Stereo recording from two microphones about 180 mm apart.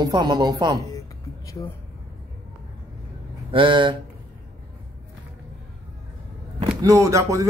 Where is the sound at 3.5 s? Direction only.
30° right (ahead or behind).